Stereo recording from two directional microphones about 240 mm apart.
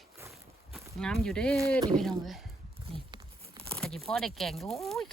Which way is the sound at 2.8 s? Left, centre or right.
Centre.